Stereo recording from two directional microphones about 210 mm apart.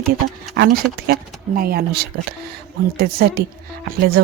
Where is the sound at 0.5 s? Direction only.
50° right (ahead or behind).